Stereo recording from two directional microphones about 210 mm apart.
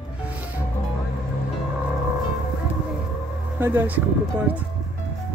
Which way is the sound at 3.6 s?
10° right (ahead or behind).